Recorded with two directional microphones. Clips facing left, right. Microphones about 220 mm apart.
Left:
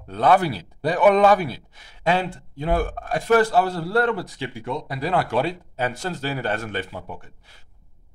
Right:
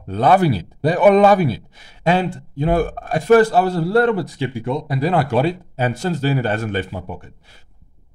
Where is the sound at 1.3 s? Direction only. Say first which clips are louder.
Right 6 dB; 10° right (ahead or behind).